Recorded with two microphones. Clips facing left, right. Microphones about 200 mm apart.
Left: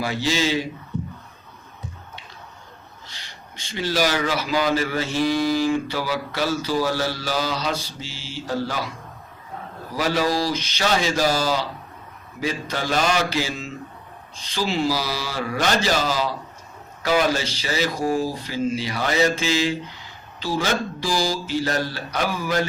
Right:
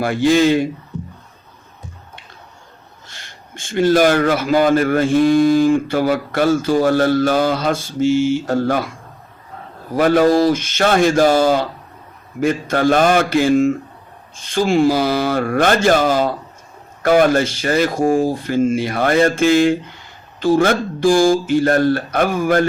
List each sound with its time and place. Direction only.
0.0 s speech: 55° right (ahead or behind)
3.1 s speech: 50° right (ahead or behind)
9.9 s speech: 55° right (ahead or behind)